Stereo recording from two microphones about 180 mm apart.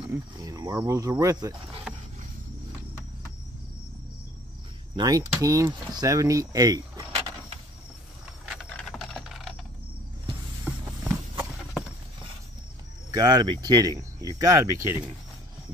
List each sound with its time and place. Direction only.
0.4 s speech: 20° right (ahead or behind)
4.9 s speech: 20° right (ahead or behind)
8.5 s a sound: centre (ahead or behind)
10.6 s walk: 5° right (ahead or behind)
13.1 s speech: 20° right (ahead or behind)